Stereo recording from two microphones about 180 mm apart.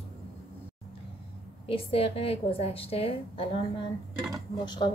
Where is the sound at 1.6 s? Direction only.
30° left (ahead or behind).